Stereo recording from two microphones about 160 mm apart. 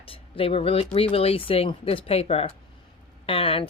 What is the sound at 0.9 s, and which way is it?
Speech, 40° left (ahead or behind).